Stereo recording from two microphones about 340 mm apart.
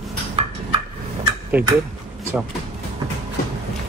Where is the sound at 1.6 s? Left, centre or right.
Centre.